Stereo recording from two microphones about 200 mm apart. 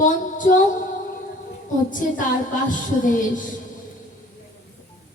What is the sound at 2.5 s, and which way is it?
Child singing, 40° left (ahead or behind).